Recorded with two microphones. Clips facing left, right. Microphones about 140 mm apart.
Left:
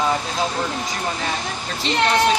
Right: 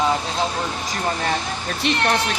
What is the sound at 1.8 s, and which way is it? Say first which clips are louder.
Speech: right 1 dB; 60° right (ahead or behind).